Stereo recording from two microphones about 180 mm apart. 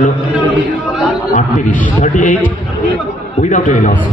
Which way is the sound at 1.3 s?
45° left (ahead or behind).